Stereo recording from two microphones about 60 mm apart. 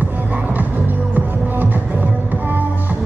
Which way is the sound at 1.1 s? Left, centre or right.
Right.